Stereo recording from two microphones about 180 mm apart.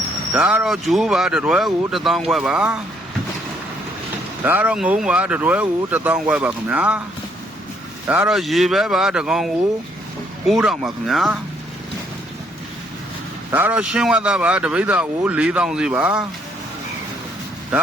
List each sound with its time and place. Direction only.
0.3 s speech: 5° right (ahead or behind)
4.4 s speech: 10° right (ahead or behind)
8.0 s speech: 10° right (ahead or behind)
13.5 s speech: 10° right (ahead or behind)